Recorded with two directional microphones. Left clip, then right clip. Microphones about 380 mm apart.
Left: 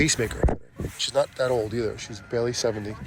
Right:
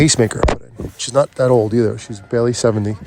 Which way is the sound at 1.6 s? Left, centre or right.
Right.